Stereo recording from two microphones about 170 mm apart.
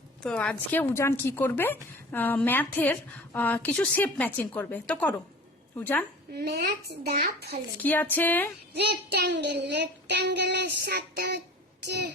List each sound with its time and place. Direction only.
0.2 s speech: 5° left (ahead or behind)
6.3 s a child's voice: 65° right (ahead or behind)
7.8 s speech: 10° left (ahead or behind)
8.7 s child singing: 75° right (ahead or behind)